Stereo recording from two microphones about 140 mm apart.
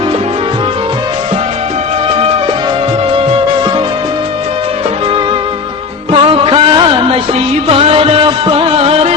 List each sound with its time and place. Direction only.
3.2 s music: 40° right (ahead or behind)
6.1 s music: 40° right (ahead or behind)